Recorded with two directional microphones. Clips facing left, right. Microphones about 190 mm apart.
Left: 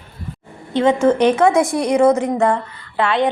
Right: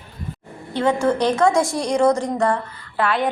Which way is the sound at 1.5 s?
Centre (ahead or behind).